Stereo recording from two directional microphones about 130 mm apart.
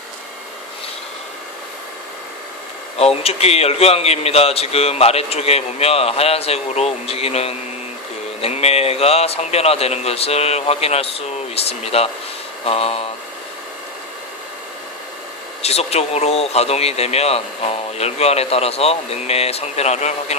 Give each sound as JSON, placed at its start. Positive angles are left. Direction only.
{"t": 3.0, "sound": "speech", "side_deg": 50}
{"t": 15.6, "sound": "speech", "side_deg": 55}